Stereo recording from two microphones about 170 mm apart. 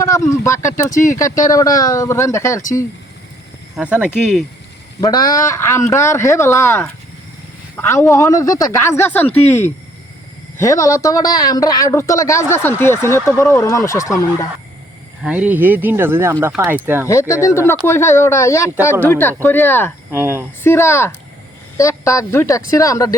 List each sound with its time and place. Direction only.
0.9 s speech: 50° left (ahead or behind)
1.2 s speech: 20° left (ahead or behind)
3.8 s speech: 5° right (ahead or behind)
4.9 s speech: 20° left (ahead or behind)
15.2 s speech: 10° right (ahead or behind)
17.1 s speech: 15° left (ahead or behind)
20.1 s speech: 15° right (ahead or behind)
20.7 s speech: 15° left (ahead or behind)